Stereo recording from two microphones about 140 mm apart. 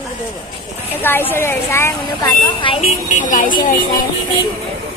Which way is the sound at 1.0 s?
15° left (ahead or behind).